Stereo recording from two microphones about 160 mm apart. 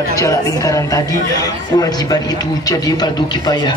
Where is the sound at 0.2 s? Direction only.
20° left (ahead or behind).